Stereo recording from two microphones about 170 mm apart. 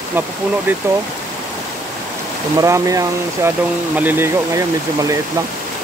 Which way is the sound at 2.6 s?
20° right (ahead or behind).